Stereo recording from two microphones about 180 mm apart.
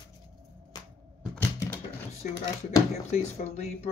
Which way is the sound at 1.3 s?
10° left (ahead or behind).